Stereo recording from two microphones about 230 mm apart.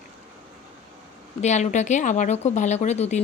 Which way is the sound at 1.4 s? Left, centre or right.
Left.